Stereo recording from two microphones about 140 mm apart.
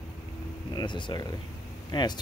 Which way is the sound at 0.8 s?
35° left (ahead or behind).